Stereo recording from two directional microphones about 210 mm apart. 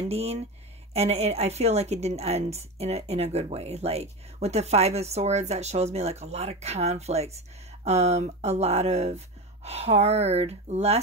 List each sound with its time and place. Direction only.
0.1 s a woman's voice: 30° right (ahead or behind)